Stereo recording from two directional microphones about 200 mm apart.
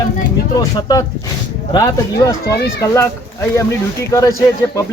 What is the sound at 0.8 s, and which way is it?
Speech, 20° left (ahead or behind).